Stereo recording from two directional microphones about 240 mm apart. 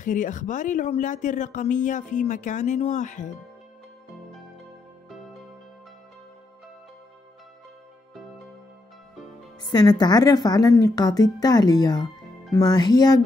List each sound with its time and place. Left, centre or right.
0.0 s speech: left
9.6 s a woman's voice: centre